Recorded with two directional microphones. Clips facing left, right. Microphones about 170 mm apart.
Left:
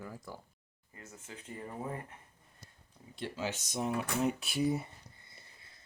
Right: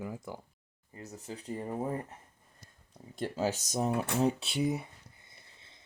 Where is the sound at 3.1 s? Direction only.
45° right (ahead or behind).